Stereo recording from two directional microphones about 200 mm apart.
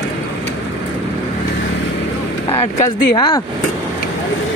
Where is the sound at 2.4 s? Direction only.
35° left (ahead or behind).